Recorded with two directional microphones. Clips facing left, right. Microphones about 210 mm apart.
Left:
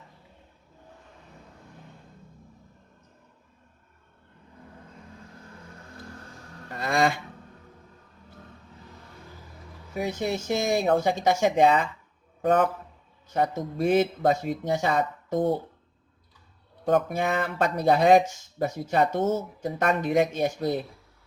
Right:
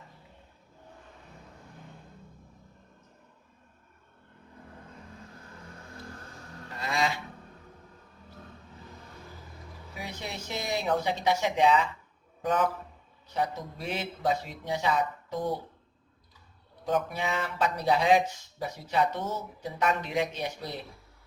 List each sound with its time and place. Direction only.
6.7 s a sound: 50° left (ahead or behind)
9.9 s speech: 45° left (ahead or behind)
16.8 s speech: 50° left (ahead or behind)